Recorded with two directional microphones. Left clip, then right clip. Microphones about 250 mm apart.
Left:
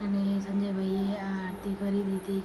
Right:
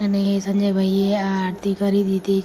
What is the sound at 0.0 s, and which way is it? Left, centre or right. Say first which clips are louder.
Speech: right 10 dB; right.